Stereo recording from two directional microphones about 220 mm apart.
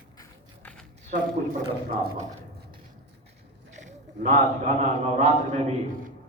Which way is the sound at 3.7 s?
35° right (ahead or behind).